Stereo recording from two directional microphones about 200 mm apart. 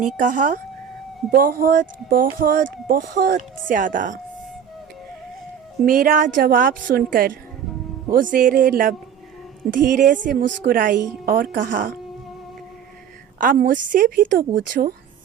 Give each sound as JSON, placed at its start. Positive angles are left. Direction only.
{"t": 0.2, "sound": "speech", "side_deg": -40}
{"t": 5.8, "sound": "speech", "side_deg": -45}
{"t": 13.4, "sound": "speech", "side_deg": -45}